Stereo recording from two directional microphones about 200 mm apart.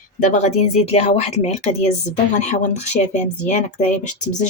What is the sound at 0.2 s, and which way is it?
Speech, 35° left (ahead or behind).